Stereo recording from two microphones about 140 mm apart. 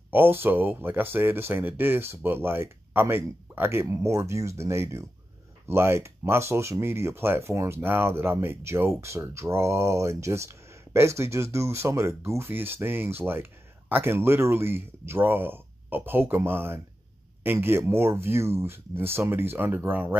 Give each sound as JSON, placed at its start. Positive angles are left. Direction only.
{"t": 0.1, "sound": "speech", "side_deg": -15}